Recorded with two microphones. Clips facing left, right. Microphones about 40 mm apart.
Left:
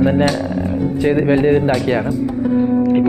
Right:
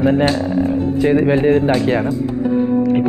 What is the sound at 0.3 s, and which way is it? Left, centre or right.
Speech, right.